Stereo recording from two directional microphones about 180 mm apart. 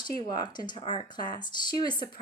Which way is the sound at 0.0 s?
20° left (ahead or behind).